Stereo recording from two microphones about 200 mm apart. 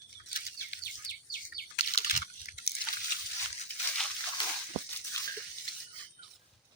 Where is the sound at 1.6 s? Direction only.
45° left (ahead or behind).